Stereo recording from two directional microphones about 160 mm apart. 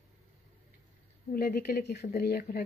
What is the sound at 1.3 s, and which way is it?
Speech, 70° left (ahead or behind).